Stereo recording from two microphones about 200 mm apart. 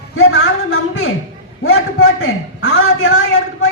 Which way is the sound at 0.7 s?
90° left.